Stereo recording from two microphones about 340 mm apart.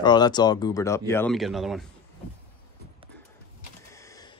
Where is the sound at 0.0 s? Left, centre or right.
Centre.